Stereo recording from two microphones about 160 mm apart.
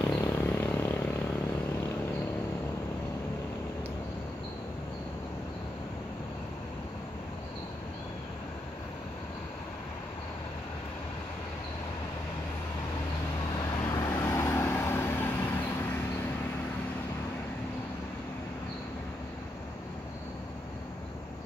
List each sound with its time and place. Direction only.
0.0 s vehicle: 15° left (ahead or behind)
13.8 s vehicle: 20° left (ahead or behind)